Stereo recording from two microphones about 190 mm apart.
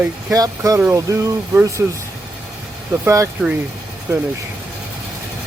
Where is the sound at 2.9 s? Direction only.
15° right (ahead or behind).